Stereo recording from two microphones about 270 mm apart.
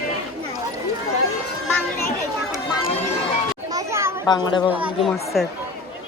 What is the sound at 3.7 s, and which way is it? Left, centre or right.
Children playing, centre.